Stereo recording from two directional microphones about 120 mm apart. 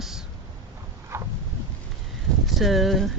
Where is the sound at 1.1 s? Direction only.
20° right (ahead or behind).